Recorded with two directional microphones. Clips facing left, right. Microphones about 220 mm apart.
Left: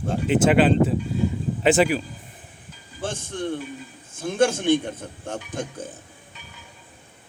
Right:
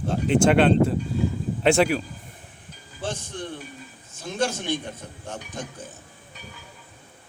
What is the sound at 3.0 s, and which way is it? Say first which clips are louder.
Music: left 2 dB; 55° left (ahead or behind).